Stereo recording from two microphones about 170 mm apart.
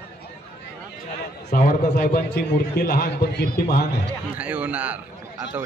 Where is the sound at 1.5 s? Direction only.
60° left (ahead or behind).